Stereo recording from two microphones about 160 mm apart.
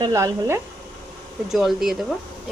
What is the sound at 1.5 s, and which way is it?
Speech, centre (ahead or behind).